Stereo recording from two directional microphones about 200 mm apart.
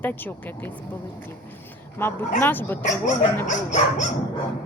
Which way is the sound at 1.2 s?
10° left (ahead or behind).